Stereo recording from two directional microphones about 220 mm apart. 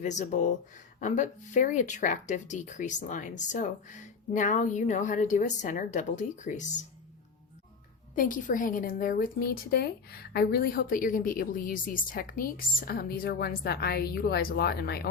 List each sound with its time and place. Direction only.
0.0 s a woman's voice: 35° left (ahead or behind)
8.1 s a woman's voice: 35° left (ahead or behind)